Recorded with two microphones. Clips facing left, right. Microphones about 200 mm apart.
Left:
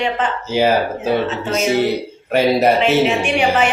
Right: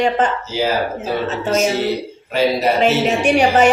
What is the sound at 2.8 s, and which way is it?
Speech, 40° right (ahead or behind).